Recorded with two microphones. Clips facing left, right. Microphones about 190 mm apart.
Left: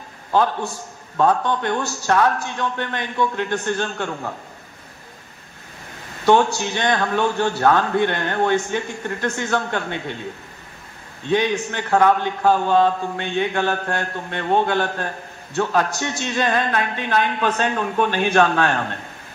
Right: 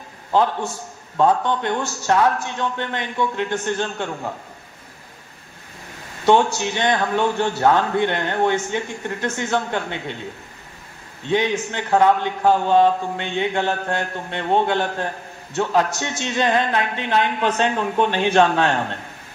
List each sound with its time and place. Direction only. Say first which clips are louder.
1.1 s a man's voice: right 1 dB; 20° right (ahead or behind)
6.2 s a man's voice: even; 20° right (ahead or behind)
11.2 s a man's voice: left 1 dB; 20° right (ahead or behind)